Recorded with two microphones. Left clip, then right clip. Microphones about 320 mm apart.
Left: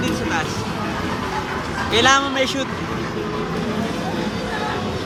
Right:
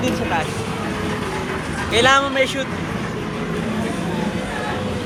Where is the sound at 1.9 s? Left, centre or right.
Centre.